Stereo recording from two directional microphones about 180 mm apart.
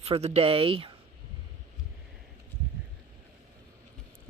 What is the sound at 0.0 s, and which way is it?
Speech, 35° right (ahead or behind).